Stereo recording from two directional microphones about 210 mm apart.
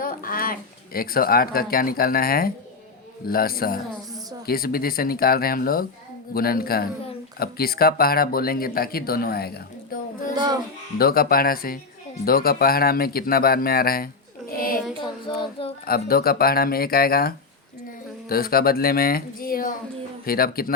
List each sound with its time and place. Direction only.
0.0 s a sound: 40° left (ahead or behind)
0.9 s speech: 45° left (ahead or behind)
10.3 s speech: 20° right (ahead or behind)
10.9 s speech: 45° left (ahead or behind)
15.9 s speech: 45° left (ahead or behind)